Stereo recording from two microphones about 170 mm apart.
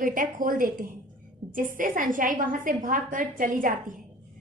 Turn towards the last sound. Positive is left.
turn(degrees=-50)  # may be behind; listen again after turning